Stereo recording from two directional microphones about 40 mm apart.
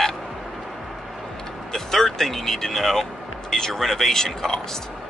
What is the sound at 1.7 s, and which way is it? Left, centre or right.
Speech, centre.